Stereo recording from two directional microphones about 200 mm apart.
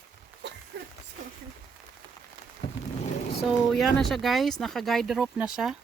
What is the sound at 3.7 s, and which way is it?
Speech, centre (ahead or behind).